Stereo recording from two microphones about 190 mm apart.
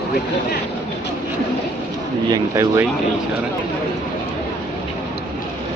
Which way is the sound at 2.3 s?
15° right (ahead or behind).